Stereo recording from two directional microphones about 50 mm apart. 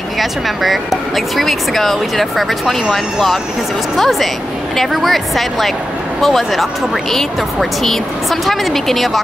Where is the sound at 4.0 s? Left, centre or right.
Centre.